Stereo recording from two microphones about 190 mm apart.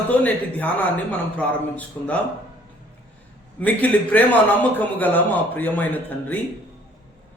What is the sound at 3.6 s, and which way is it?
A man's voice, 10° left (ahead or behind).